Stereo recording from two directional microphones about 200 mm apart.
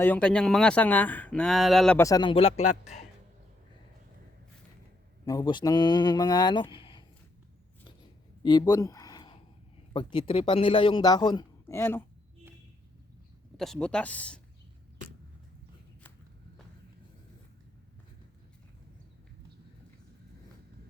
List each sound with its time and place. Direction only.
0.0 s speech: 5° left (ahead or behind)
2.0 s speech: 20° left (ahead or behind); by 3.0 s 35° left (ahead or behind)
5.2 s speech: 20° left (ahead or behind)
8.4 s a sound: 20° left (ahead or behind)
9.9 s speech: 25° left (ahead or behind)
13.6 s speech: 5° left (ahead or behind)